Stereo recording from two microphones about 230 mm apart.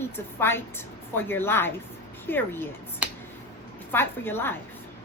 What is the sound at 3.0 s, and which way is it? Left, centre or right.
Finger snapping, centre.